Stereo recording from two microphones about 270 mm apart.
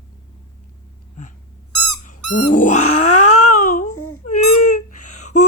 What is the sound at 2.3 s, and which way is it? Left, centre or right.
Cat, left.